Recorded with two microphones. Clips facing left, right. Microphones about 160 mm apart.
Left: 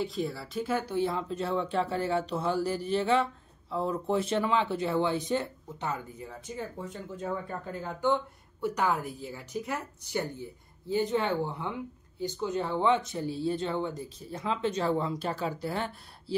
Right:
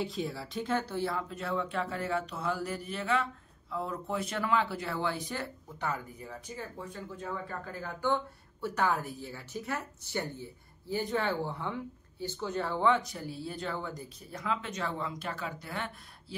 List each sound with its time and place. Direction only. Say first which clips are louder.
0.0 s speech: left 3 dB; centre (ahead or behind); by 16.3 s 30° left (ahead or behind)